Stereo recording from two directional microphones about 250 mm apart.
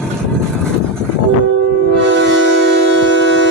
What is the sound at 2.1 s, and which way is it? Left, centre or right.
Music, right.